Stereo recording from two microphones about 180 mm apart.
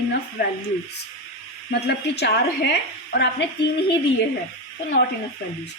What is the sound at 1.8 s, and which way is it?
Speech, 70° left (ahead or behind).